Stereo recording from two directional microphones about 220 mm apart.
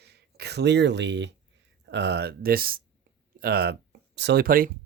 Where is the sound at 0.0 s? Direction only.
50° right (ahead or behind).